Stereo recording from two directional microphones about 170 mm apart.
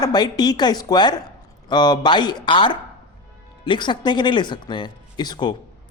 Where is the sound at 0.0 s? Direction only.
25° left (ahead or behind).